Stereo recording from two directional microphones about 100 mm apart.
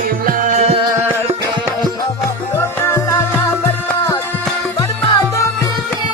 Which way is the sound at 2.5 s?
30° left (ahead or behind).